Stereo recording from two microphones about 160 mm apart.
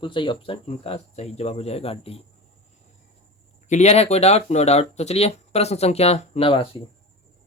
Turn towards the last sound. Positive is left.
turn(degrees=35)  # may be behind; listen again after turning